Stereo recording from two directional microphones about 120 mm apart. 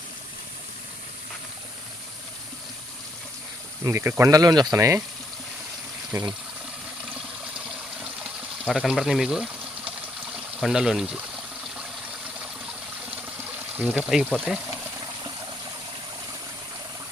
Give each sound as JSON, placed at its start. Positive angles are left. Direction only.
{"t": 3.8, "sound": "speech", "side_deg": -20}
{"t": 6.1, "sound": "speech", "side_deg": -30}
{"t": 8.2, "sound": "water", "side_deg": -5}
{"t": 10.6, "sound": "speech", "side_deg": -5}
{"t": 13.7, "sound": "speech", "side_deg": -10}